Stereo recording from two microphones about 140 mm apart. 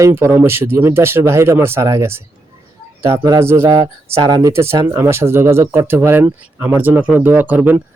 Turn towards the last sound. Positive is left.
turn(degrees=-10)  # may be behind; listen again after turning